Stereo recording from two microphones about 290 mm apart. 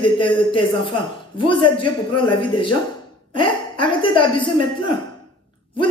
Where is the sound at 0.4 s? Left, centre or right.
Centre.